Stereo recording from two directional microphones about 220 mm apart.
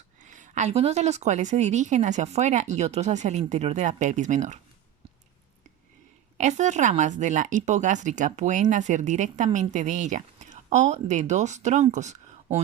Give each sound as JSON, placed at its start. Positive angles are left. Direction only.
{"t": 0.2, "sound": "a woman's voice", "side_deg": -35}
{"t": 6.3, "sound": "a woman's voice", "side_deg": -30}